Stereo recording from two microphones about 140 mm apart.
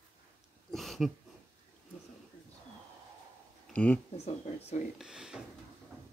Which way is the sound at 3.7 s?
10° left (ahead or behind).